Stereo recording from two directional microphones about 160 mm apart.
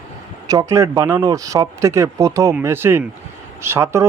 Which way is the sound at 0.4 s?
20° right (ahead or behind).